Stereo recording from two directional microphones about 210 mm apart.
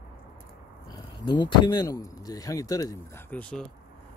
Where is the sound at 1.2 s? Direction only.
20° left (ahead or behind).